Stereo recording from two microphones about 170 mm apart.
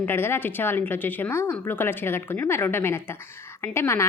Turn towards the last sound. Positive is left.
turn(degrees=15)  # may be behind; listen again after turning